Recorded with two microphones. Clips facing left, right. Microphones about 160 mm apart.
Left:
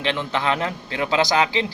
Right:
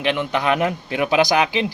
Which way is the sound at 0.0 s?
15° right (ahead or behind).